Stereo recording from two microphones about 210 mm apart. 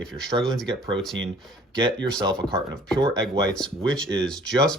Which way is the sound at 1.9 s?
5° left (ahead or behind).